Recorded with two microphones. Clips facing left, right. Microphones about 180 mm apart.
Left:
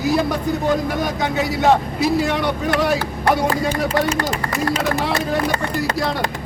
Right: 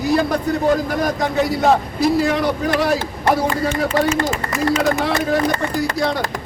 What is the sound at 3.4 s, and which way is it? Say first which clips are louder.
Speech: even; 35° left (ahead or behind).